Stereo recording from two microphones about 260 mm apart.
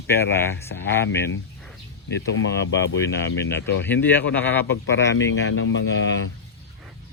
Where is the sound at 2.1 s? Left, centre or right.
Left.